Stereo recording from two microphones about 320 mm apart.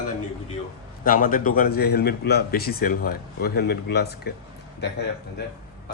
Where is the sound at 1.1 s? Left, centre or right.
Left.